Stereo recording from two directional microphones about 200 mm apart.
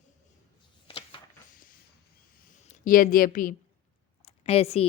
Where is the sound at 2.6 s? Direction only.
40° left (ahead or behind).